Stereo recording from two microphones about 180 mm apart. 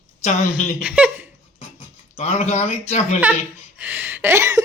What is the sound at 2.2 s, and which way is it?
Speech, 35° left (ahead or behind).